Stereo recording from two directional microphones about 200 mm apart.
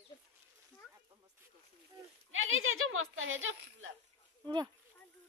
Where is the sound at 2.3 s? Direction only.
85° right.